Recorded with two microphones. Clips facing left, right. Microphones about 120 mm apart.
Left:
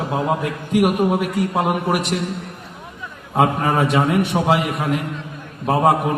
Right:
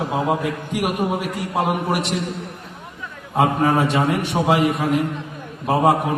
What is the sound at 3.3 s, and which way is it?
A man's voice, centre (ahead or behind).